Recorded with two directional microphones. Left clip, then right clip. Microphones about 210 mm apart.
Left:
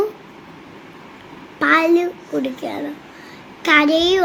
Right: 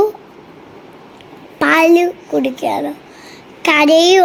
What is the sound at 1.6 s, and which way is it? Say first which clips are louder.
A woman's voice: right 4 dB; 25° right (ahead or behind).